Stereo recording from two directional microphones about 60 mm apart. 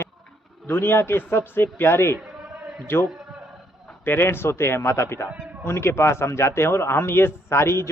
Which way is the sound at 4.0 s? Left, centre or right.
Left.